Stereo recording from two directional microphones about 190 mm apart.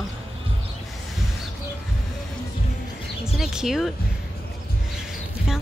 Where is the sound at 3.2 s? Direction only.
5° right (ahead or behind).